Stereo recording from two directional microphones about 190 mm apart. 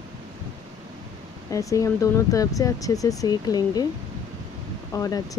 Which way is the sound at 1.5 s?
15° left (ahead or behind).